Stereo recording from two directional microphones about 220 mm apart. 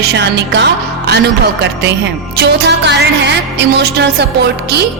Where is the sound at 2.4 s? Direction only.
50° right (ahead or behind).